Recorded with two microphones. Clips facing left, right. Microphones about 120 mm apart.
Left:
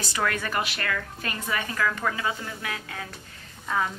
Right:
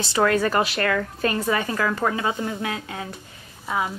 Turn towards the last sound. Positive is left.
turn(degrees=-10)  # may be behind; listen again after turning